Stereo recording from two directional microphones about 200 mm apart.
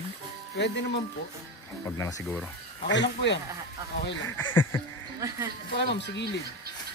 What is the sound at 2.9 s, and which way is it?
Speech, 60° left (ahead or behind).